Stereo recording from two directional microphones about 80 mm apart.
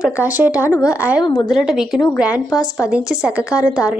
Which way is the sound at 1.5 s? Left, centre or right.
Centre.